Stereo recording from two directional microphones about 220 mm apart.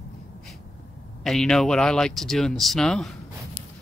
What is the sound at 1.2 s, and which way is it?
Speech, centre (ahead or behind).